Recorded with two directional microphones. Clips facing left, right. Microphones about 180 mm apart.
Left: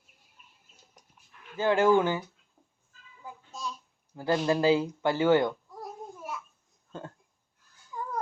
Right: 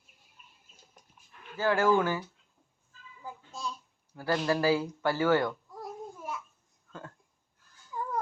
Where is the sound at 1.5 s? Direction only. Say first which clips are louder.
Left 3 dB; 20° left (ahead or behind).